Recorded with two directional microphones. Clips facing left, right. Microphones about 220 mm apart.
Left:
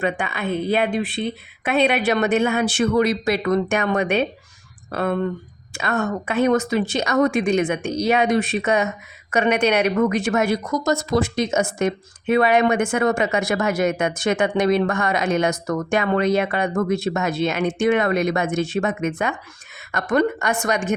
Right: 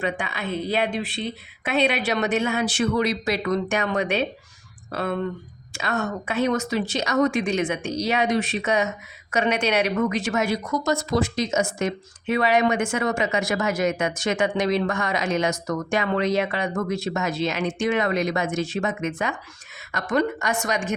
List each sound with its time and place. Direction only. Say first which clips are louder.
0.0 s speech: left 4 dB; 55° left (ahead or behind)